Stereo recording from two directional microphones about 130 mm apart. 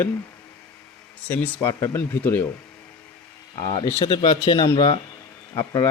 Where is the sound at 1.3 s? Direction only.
15° left (ahead or behind).